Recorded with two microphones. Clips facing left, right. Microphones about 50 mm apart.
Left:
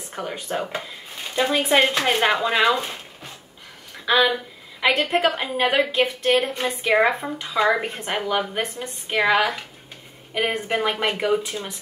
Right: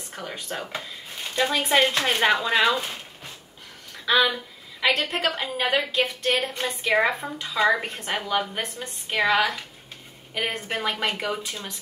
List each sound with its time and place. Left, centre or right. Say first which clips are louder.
0.1 s a woman's voice: left 5 dB; centre
4.1 s a woman's voice: left 2 dB; left